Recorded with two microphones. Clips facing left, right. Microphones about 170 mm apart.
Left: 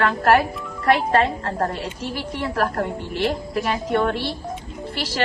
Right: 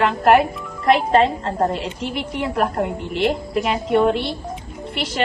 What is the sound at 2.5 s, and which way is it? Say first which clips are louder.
A woman's voice: right 2 dB; 10° right (ahead or behind).